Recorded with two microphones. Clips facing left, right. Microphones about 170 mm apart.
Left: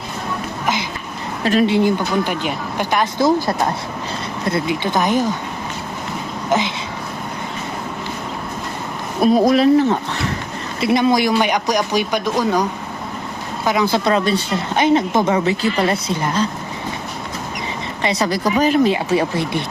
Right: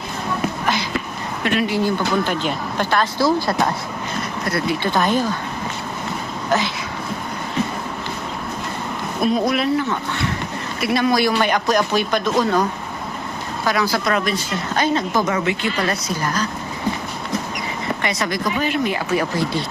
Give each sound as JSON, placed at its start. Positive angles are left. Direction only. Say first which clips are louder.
{"t": 1.5, "sound": "speech", "louder": "left 5 dB", "side_deg": 35}
{"t": 1.7, "sound": "speech", "louder": "left 3 dB", "side_deg": 15}
{"t": 9.2, "sound": "speech", "louder": "left 6 dB", "side_deg": 40}
{"t": 10.8, "sound": "speech", "louder": "left 3 dB", "side_deg": 25}
{"t": 13.9, "sound": "a woman's voice", "louder": "left 4 dB", "side_deg": 25}
{"t": 18.0, "sound": "speech", "louder": "left 6 dB", "side_deg": 30}
{"t": 18.9, "sound": "a woman's voice", "louder": "left 4 dB", "side_deg": 25}